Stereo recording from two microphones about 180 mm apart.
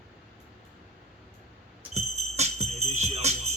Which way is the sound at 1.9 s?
40° right (ahead or behind).